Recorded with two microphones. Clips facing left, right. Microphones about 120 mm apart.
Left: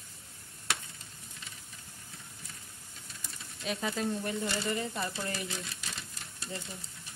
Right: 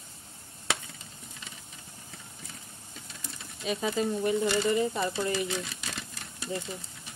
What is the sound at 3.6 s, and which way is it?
Speech, 5° right (ahead or behind).